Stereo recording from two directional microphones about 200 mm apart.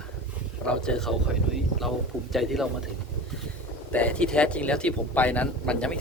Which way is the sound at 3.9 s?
5° left (ahead or behind).